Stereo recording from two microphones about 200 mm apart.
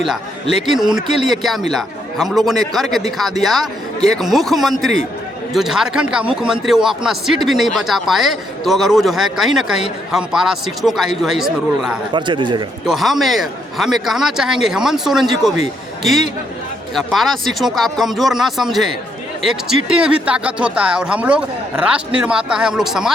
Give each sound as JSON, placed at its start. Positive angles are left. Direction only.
{"t": 0.7, "sound": "speech", "side_deg": 0}
{"t": 12.1, "sound": "speech", "side_deg": -25}
{"t": 12.8, "sound": "speech", "side_deg": 0}
{"t": 16.9, "sound": "speech", "side_deg": 0}